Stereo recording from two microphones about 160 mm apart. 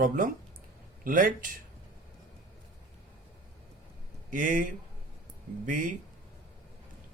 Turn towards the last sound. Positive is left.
turn(degrees=-55)  # may be behind; listen again after turning